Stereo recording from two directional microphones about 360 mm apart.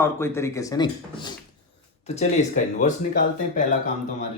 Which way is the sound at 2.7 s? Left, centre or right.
Left.